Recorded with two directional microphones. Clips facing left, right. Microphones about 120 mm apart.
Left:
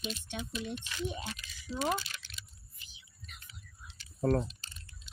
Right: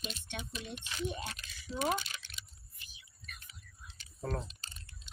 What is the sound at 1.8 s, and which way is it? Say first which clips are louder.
Typing: even; 20° right (ahead or behind).